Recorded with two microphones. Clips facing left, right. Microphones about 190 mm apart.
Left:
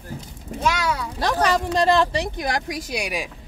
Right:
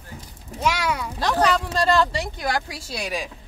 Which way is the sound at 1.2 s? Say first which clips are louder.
Even; 20° left (ahead or behind).